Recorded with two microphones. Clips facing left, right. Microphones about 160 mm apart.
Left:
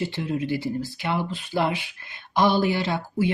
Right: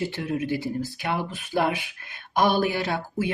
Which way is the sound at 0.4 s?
15° right (ahead or behind).